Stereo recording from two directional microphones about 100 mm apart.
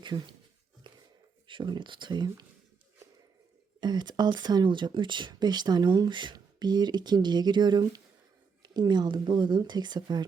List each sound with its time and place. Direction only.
0.0 s speech: 50° right (ahead or behind)
1.5 s speech: 50° right (ahead or behind)
3.8 s speech: 45° right (ahead or behind)